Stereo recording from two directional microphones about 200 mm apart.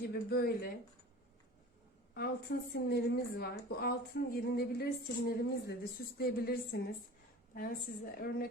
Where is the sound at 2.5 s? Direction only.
60° left (ahead or behind).